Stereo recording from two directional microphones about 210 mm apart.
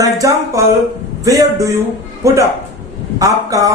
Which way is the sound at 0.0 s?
15° right (ahead or behind).